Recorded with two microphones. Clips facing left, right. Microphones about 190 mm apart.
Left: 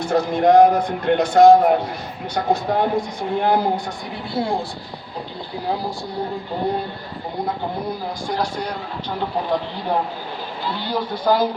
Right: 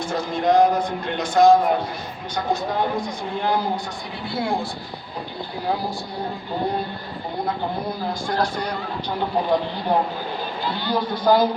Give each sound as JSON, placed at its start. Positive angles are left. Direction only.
{"t": 0.0, "sound": "speech", "side_deg": 60}
{"t": 4.4, "sound": "a woman's voice", "side_deg": 35}
{"t": 8.3, "sound": "speech", "side_deg": 10}
{"t": 10.8, "sound": "speech", "side_deg": 5}